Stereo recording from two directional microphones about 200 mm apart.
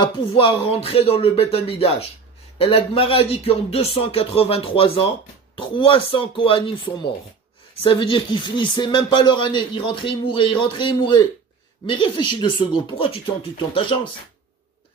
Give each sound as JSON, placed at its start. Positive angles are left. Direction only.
{"t": 0.0, "sound": "speech", "side_deg": 25}